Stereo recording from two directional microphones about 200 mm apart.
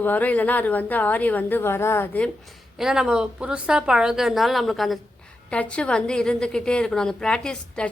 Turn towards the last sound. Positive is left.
turn(degrees=5)  # may be behind; listen again after turning